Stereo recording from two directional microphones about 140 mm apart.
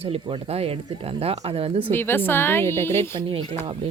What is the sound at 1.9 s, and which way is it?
Speech, 15° left (ahead or behind).